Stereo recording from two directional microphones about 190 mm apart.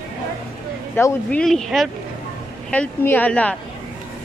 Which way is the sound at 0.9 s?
10° left (ahead or behind).